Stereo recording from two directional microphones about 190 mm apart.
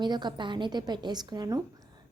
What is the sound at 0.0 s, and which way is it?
A woman's voice, 25° right (ahead or behind).